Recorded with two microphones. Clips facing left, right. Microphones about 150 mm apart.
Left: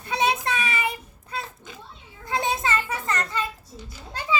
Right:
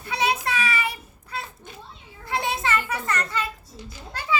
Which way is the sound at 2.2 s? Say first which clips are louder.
Left 1 dB; 20° left (ahead or behind).